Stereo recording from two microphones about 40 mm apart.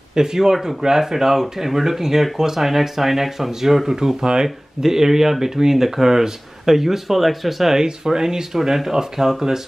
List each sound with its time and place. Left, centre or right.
0.1 s speech: centre
7.8 s speech: centre